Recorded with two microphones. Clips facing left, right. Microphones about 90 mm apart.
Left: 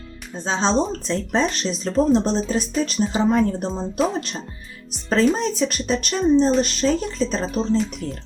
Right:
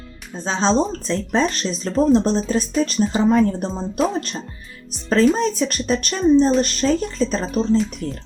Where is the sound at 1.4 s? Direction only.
Centre (ahead or behind).